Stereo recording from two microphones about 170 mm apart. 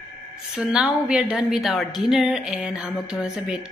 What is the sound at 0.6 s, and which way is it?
A woman's voice, 5° right (ahead or behind).